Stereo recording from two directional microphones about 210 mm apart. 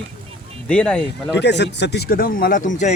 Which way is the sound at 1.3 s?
55° left (ahead or behind).